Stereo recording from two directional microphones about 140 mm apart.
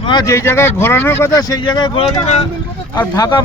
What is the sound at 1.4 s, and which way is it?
Speech, 30° left (ahead or behind).